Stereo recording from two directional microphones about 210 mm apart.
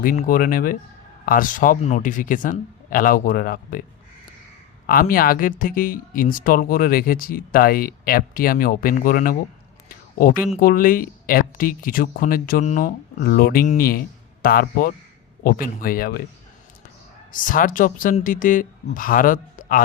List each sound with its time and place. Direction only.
0.0 s a man's voice: 40° left (ahead or behind)
4.9 s speech: 45° left (ahead or behind)
10.6 s speech: 40° left (ahead or behind)
17.3 s a man's voice: 40° left (ahead or behind)